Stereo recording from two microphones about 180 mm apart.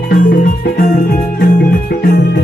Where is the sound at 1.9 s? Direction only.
65° left (ahead or behind).